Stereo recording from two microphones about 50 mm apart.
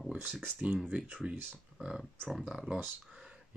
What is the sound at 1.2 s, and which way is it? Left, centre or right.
Speech, centre.